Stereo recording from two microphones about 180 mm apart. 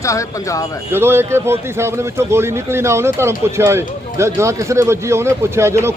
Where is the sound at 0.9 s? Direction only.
15° right (ahead or behind).